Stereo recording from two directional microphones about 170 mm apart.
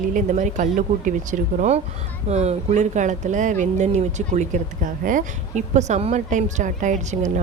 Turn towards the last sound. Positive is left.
turn(degrees=-45)  # may be behind; listen again after turning